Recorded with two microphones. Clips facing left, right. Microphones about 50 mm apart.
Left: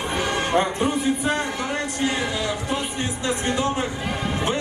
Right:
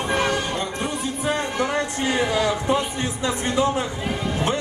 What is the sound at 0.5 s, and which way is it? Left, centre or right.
Speech, left.